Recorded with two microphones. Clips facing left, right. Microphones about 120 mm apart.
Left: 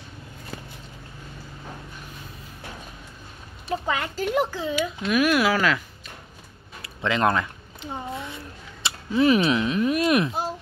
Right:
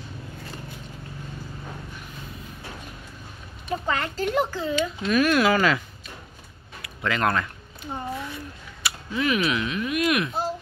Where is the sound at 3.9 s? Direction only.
10° left (ahead or behind).